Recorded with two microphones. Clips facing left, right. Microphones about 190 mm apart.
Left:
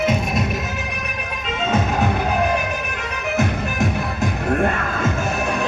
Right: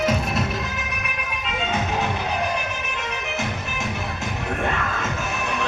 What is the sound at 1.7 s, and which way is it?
Music, 50° left (ahead or behind).